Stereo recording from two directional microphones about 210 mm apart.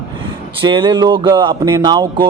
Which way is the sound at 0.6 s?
20° right (ahead or behind).